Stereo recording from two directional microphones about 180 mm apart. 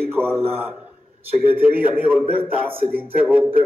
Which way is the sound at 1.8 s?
10° right (ahead or behind).